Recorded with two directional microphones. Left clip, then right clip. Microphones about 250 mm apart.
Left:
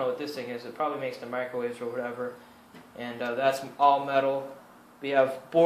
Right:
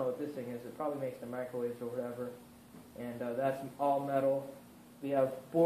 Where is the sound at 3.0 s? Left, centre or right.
Left.